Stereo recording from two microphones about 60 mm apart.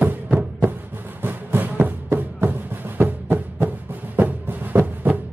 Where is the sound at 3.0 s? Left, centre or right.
Right.